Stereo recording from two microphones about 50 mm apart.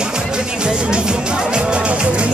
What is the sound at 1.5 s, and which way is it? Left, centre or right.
Music, right.